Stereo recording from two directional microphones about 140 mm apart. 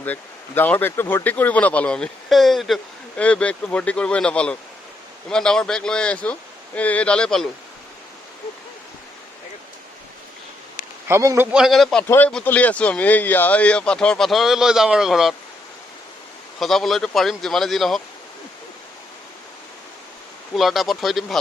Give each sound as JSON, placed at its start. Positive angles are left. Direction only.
{"t": 0.0, "sound": "speech", "side_deg": 10}
{"t": 11.1, "sound": "a man's voice", "side_deg": -20}
{"t": 11.5, "sound": "speech", "side_deg": 0}
{"t": 12.0, "sound": "speech", "side_deg": 15}
{"t": 16.6, "sound": "speech", "side_deg": 0}
{"t": 20.5, "sound": "speech", "side_deg": 0}